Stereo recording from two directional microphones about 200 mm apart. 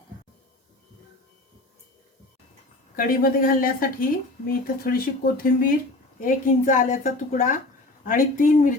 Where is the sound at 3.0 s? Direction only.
45° left (ahead or behind).